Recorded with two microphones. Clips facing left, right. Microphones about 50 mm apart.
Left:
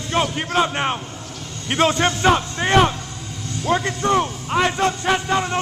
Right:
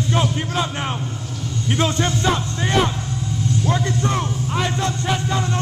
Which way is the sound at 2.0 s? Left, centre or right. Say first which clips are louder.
Left 3 dB; left.